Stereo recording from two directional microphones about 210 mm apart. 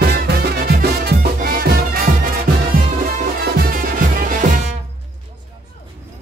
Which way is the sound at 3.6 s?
40° right (ahead or behind).